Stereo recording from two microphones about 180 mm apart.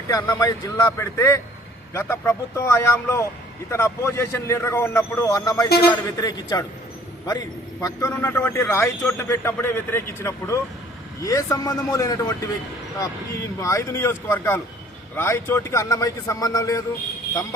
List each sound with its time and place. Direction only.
0.1 s a man's voice: 20° left (ahead or behind)
13.6 s a man's voice: 15° left (ahead or behind)